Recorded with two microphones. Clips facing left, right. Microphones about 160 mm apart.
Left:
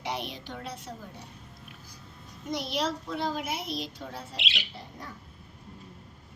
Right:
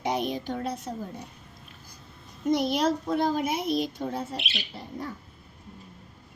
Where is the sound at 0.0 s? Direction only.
45° right (ahead or behind).